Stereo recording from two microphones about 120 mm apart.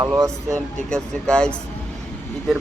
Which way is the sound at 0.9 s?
5° left (ahead or behind).